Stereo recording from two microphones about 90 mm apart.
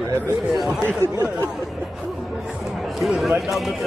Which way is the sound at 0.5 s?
Centre (ahead or behind).